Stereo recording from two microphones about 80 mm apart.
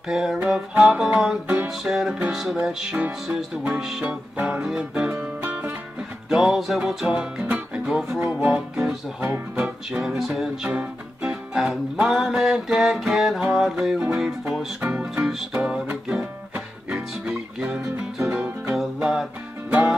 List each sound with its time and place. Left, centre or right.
0.1 s music: centre
4.0 s music: centre
4.6 s music: centre
6.2 s music: centre
10.7 s music: centre
11.5 s music: centre
14.8 s music: right
15.2 s music: centre
18.3 s music: centre
18.8 s music: centre